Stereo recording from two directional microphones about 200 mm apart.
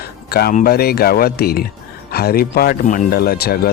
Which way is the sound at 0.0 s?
50° left (ahead or behind).